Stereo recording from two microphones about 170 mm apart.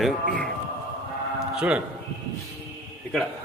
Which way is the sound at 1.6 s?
5° right (ahead or behind).